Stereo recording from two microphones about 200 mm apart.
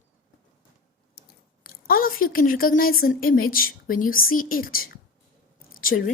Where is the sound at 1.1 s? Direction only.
50° left (ahead or behind).